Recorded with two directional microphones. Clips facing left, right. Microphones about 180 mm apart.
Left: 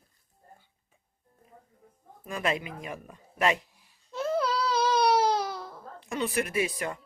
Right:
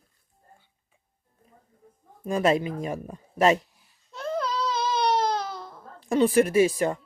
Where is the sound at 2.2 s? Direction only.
35° right (ahead or behind).